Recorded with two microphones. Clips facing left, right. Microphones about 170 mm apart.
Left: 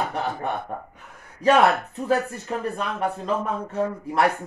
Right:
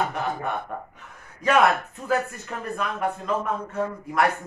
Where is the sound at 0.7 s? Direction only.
30° left (ahead or behind).